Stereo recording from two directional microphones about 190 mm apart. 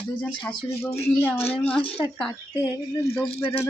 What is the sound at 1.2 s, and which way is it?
Speech, 10° left (ahead or behind).